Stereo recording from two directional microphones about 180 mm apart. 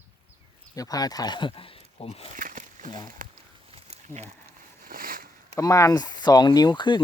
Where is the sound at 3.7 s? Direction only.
35° right (ahead or behind).